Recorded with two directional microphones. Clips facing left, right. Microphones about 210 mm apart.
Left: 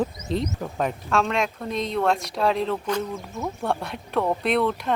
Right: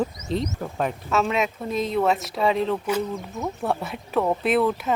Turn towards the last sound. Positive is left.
turn(degrees=-5)  # may be behind; listen again after turning